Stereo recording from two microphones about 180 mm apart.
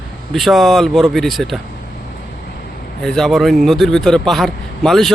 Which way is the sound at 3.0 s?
Centre (ahead or behind).